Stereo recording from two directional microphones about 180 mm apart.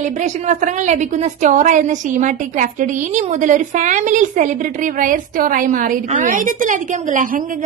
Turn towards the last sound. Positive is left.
turn(degrees=-45)  # may be behind; listen again after turning